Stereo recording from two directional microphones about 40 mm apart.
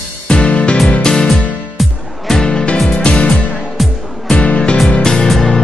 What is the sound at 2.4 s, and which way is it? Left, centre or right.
Music, left.